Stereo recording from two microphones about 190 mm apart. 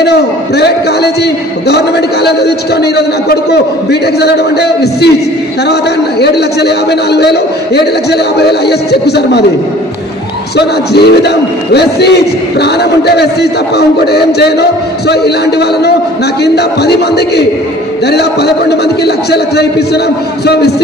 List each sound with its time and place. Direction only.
0.0 s a man's voice: 60° left (ahead or behind)
10.5 s a man's voice: 60° left (ahead or behind)